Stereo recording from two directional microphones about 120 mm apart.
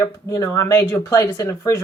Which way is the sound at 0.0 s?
30° left (ahead or behind).